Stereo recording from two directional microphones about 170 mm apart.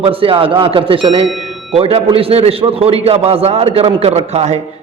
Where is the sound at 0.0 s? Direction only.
30° right (ahead or behind).